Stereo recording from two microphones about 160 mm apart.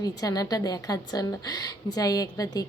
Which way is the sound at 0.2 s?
25° left (ahead or behind).